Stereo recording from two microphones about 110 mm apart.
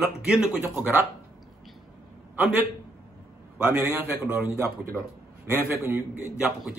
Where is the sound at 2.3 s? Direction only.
15° right (ahead or behind).